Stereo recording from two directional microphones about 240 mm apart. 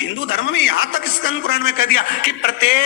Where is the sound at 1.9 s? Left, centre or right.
Left.